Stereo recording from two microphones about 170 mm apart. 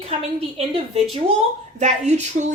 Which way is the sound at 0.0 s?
35° right (ahead or behind).